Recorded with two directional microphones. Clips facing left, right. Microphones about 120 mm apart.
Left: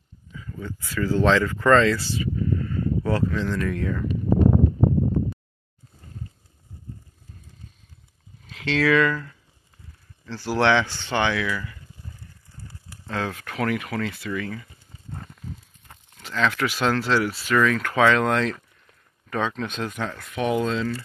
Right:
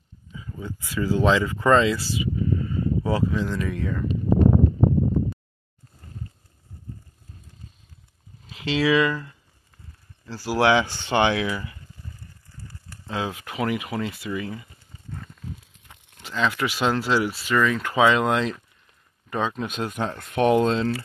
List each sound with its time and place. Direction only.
0.3 s speech: 20° right (ahead or behind); by 4.1 s centre (ahead or behind)
8.5 s speech: 5° right (ahead or behind); by 11.8 s 20° right (ahead or behind)
12.9 s speech: 5° right (ahead or behind)
15.9 s speech: 5° right (ahead or behind)
20.3 s speech: 35° right (ahead or behind)